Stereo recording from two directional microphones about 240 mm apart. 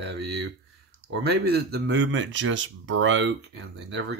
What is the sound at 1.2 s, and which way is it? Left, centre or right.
Speech, right.